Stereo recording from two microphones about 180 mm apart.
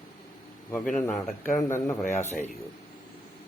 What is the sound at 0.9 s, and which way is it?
Speech, 5° left (ahead or behind).